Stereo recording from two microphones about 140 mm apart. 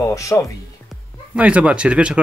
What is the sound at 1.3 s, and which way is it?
Speech, 10° right (ahead or behind).